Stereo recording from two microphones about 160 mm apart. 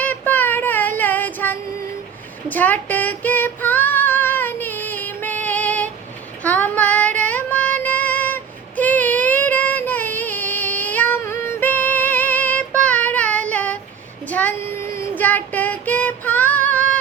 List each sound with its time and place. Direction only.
0.0 s child singing: 10° left (ahead or behind)
2.5 s female singing: 10° left (ahead or behind)
14.3 s a sound: 10° left (ahead or behind)
15.2 s female singing: 10° left (ahead or behind)